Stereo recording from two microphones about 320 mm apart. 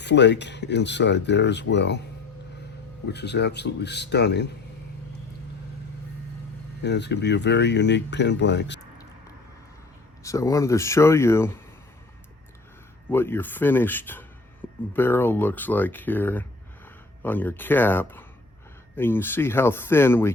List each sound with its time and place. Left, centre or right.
0.0 s speech: left
3.1 s speech: left
6.8 s speech: left
10.2 s speech: centre
13.1 s speech: centre